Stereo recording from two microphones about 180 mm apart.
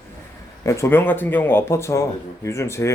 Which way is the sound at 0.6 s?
15° left (ahead or behind).